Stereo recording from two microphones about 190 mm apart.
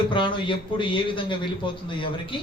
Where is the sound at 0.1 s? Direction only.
25° left (ahead or behind).